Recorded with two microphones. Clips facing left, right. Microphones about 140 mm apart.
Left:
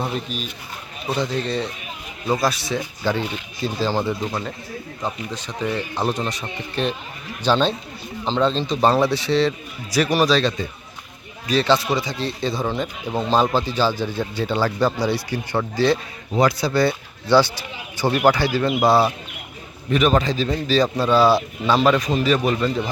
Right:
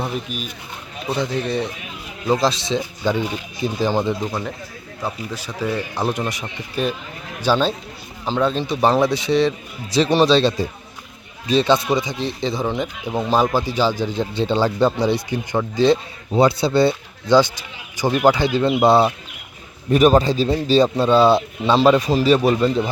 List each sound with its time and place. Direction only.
0.3 s speech: 50° right (ahead or behind)
1.1 s speech: 15° right (ahead or behind)
19.9 s speech: 40° right (ahead or behind)